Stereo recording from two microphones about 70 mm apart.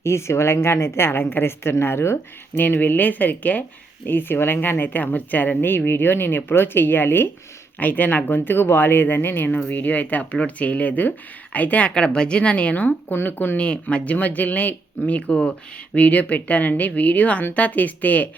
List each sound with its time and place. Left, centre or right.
0.0 s a woman's voice: left
13.6 s a woman's voice: centre